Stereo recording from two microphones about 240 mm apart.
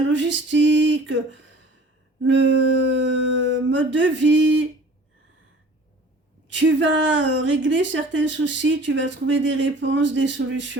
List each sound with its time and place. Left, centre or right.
0.1 s a woman's voice: right
6.5 s a woman's voice: right